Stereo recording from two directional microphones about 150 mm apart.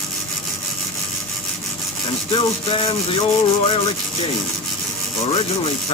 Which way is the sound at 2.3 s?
35° left (ahead or behind).